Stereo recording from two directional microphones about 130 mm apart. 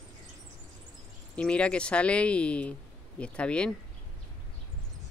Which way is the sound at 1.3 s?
10° left (ahead or behind).